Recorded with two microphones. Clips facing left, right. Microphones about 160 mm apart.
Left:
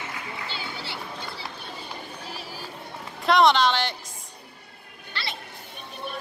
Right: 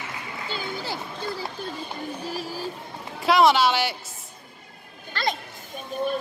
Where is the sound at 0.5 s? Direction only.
45° right (ahead or behind).